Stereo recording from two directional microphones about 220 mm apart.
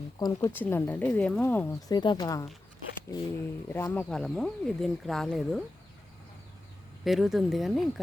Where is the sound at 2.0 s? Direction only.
20° left (ahead or behind).